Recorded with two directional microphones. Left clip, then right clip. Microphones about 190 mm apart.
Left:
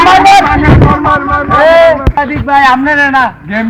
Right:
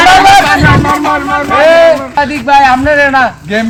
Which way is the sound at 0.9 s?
5° left (ahead or behind).